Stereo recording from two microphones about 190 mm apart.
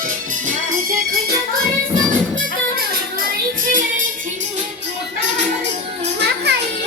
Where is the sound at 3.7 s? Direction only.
45° right (ahead or behind).